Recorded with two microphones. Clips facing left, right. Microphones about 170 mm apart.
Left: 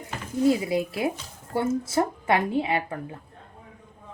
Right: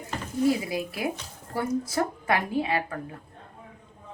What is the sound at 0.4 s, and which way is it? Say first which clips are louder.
A woman's voice: left 3 dB; 25° left (ahead or behind).